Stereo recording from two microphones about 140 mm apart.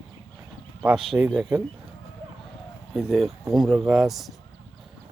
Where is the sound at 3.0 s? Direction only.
Centre (ahead or behind).